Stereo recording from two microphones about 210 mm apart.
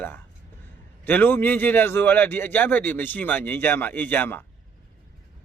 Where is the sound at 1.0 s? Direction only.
10° left (ahead or behind).